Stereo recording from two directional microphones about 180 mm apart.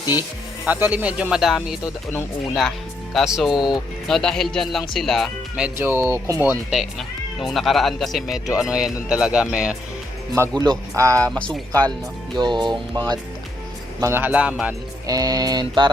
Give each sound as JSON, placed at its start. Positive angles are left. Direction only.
{"t": 0.1, "sound": "speech", "side_deg": -10}
{"t": 7.4, "sound": "speech", "side_deg": 0}
{"t": 11.2, "sound": "speech", "side_deg": 5}
{"t": 12.3, "sound": "speech", "side_deg": -25}
{"t": 14.0, "sound": "speech", "side_deg": -10}
{"t": 15.0, "sound": "speech", "side_deg": -20}